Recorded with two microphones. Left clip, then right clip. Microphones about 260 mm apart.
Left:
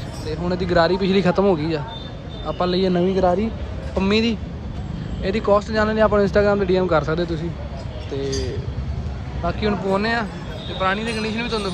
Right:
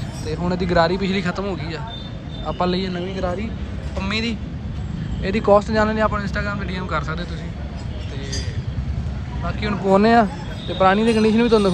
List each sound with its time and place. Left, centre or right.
0.3 s speech: centre
9.5 s speech: centre
9.8 s speech: centre